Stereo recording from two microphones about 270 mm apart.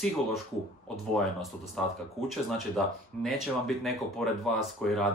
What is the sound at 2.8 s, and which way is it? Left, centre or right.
Speech, centre.